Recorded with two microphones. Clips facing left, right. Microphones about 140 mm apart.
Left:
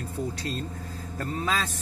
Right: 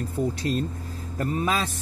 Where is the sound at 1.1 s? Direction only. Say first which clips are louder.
Right 4 dB; 15° right (ahead or behind).